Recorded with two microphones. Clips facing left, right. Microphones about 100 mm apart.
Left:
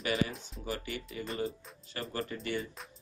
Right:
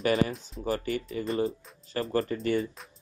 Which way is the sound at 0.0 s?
40° right (ahead or behind).